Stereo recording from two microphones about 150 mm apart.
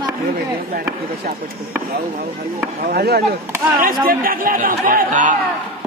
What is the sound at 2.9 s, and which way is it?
Speech, 90° right.